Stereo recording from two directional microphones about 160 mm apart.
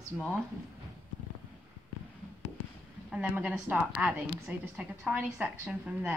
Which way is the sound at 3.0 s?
5° right (ahead or behind).